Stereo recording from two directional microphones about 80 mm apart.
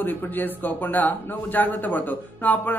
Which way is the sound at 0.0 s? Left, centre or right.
Left.